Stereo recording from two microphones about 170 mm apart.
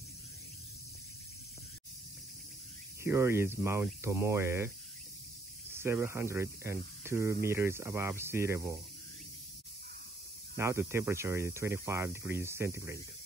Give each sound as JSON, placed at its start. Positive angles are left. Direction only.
{"t": 3.0, "sound": "speech", "side_deg": -15}
{"t": 10.5, "sound": "speech", "side_deg": -15}